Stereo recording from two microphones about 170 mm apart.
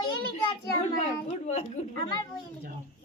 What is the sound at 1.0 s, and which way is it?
Speech, 45° left (ahead or behind).